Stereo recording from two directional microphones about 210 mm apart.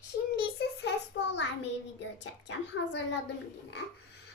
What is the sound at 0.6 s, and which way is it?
A child's voice, 55° left (ahead or behind).